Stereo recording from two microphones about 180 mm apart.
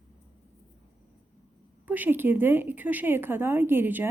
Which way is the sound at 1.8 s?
10° right (ahead or behind).